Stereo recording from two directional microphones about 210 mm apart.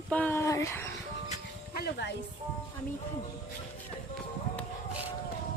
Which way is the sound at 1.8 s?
50° left (ahead or behind).